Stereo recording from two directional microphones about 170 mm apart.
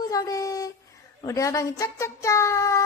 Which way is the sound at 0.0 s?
20° left (ahead or behind).